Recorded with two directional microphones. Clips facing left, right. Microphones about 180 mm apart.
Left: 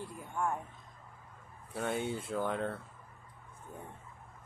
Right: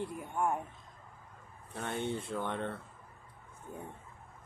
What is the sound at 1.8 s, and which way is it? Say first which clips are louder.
Speech: left 1 dB; 5° left (ahead or behind).